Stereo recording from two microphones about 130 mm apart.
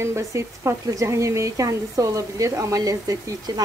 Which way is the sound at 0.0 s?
25° right (ahead or behind).